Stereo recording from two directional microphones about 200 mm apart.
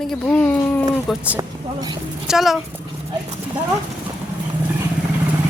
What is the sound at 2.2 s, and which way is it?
Speech, centre (ahead or behind).